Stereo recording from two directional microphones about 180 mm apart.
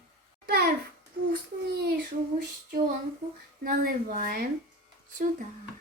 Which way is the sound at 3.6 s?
55° right (ahead or behind).